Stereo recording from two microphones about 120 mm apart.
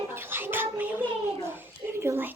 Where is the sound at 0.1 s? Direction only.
20° right (ahead or behind).